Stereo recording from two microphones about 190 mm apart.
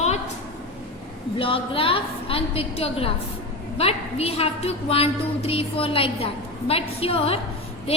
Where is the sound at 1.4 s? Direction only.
30° left (ahead or behind).